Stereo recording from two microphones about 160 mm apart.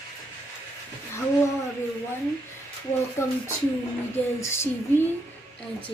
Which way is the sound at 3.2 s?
15° left (ahead or behind).